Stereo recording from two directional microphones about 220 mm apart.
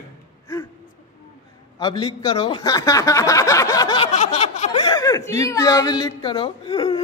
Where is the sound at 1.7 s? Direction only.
20° left (ahead or behind).